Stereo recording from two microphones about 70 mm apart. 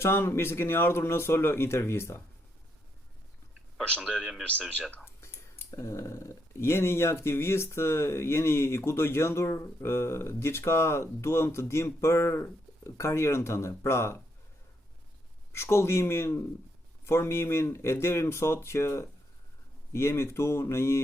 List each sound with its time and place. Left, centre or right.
0.0 s speech: left
4.0 s speech: centre
4.7 s speech: centre
5.0 s speech: left
15.5 s speech: left